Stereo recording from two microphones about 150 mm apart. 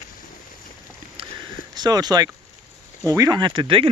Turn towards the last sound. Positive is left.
turn(degrees=-35)  # may be behind; listen again after turning